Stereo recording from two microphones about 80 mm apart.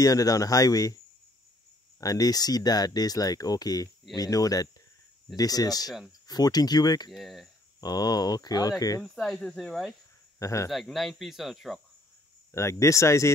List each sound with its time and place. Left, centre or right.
0.0 s speech: left
2.0 s speech: left
7.1 s speech: centre
7.8 s speech: left
9.1 s speech: centre
10.4 s speech: left
10.7 s speech: centre
12.5 s speech: left